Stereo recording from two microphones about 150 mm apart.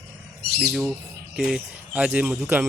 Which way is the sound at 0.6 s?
5° right (ahead or behind).